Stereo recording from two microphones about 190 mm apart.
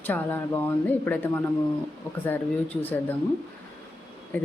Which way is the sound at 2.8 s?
10° left (ahead or behind).